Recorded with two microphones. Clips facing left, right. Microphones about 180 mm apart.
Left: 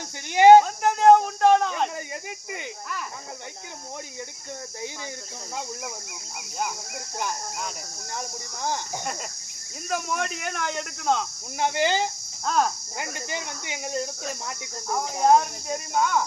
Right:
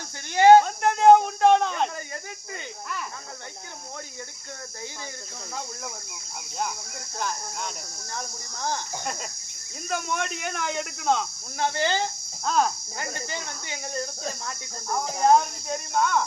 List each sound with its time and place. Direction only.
0.3 s a sound: 15° left (ahead or behind)
0.6 s a sound: centre (ahead or behind)
9.9 s speech: centre (ahead or behind)
11.6 s speech: 15° left (ahead or behind)
12.5 s speech: centre (ahead or behind)
13.0 s speech: 15° left (ahead or behind)
14.8 s speech: 5° left (ahead or behind)